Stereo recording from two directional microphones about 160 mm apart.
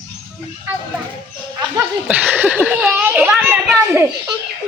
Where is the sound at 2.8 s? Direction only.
10° right (ahead or behind).